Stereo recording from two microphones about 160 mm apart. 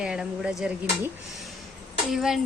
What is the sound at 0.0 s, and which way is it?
Speech, 5° right (ahead or behind).